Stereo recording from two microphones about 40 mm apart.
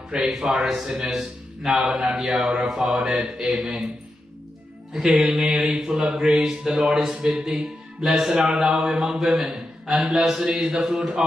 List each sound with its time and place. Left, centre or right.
0.1 s a man's voice: right
0.6 s mantra: centre
2.1 s a man's voice: centre
3.2 s mantra: centre
4.9 s mantra: centre
8.3 s a man's voice: right
8.7 s mantra: centre
9.3 s a man's voice: centre
10.5 s mantra: centre